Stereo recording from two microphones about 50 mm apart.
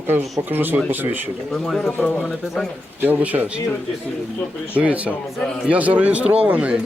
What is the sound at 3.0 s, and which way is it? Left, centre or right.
Speech, right.